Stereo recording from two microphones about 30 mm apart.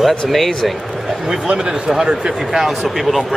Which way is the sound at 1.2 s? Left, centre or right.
Right.